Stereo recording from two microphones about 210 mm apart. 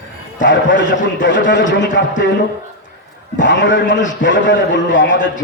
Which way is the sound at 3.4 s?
60° left (ahead or behind).